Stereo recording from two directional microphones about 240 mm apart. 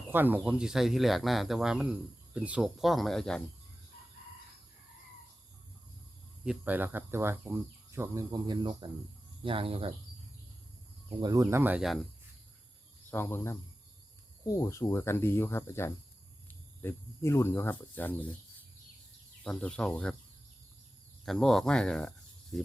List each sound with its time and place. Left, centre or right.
0.1 s speech: centre
6.4 s speech: centre; by 9.9 s right
11.2 s speech: centre
13.1 s speech: centre
19.5 s speech: centre
21.2 s speech: centre